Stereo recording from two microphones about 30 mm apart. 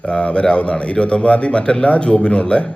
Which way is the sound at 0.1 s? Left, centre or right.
Left.